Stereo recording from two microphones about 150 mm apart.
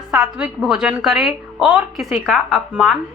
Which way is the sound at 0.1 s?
5° right (ahead or behind).